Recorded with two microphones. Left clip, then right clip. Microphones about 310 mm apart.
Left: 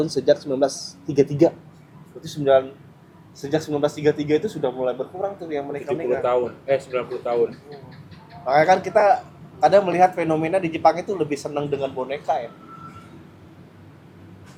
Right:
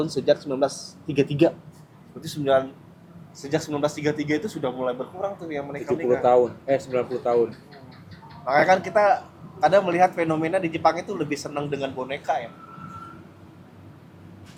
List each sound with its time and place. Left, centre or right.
0.0 s a man's voice: centre
6.2 s speech: right
8.4 s a man's voice: centre